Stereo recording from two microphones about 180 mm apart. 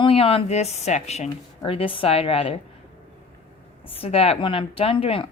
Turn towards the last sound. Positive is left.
turn(degrees=30)  # may be behind; listen again after turning